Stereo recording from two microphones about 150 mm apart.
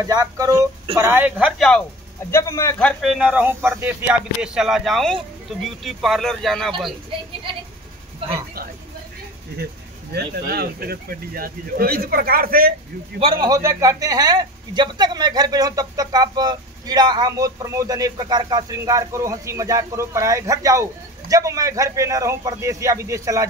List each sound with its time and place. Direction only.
0.0 s a man's voice: 25° right (ahead or behind)
1.6 s speech: 5° left (ahead or behind)
2.3 s speech: 20° left (ahead or behind)
3.0 s speech: 5° right (ahead or behind)
10.1 s speech: 90° right
13.2 s a man's voice: 25° right (ahead or behind)